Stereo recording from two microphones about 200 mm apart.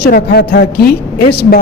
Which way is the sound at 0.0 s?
55° left (ahead or behind).